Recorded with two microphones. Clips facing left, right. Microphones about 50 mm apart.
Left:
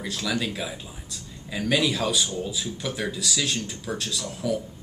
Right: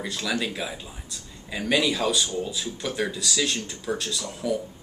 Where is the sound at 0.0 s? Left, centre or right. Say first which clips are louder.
Even; centre.